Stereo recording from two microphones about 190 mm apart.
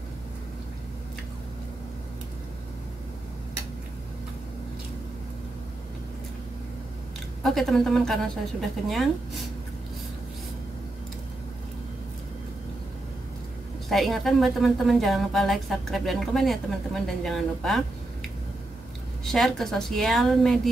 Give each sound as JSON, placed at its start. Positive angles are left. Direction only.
{"t": 7.4, "sound": "a woman's voice", "side_deg": 0}
{"t": 13.8, "sound": "a woman's voice", "side_deg": 0}
{"t": 19.2, "sound": "a woman's voice", "side_deg": 0}